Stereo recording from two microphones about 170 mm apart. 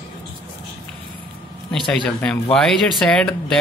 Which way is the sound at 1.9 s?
5° left (ahead or behind).